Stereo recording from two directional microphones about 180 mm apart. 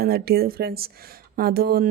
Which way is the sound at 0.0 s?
60° right (ahead or behind).